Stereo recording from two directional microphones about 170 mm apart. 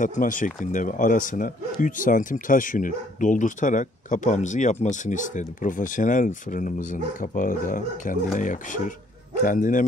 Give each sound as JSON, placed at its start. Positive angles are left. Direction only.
{"t": 0.0, "sound": "speech", "side_deg": 50}